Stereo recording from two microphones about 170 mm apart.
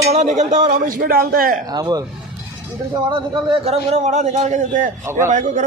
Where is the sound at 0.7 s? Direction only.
55° right (ahead or behind).